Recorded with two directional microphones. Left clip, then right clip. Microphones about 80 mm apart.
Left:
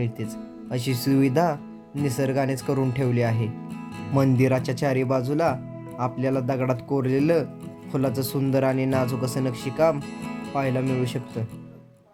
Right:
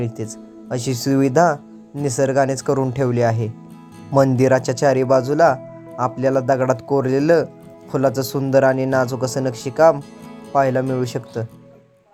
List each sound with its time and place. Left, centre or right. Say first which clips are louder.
0.7 s speech: right 4 dB; right
4.4 s speech: right 7 dB; right